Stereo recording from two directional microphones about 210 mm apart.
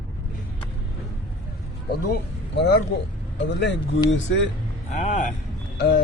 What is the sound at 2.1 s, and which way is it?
Speech, 55° left (ahead or behind).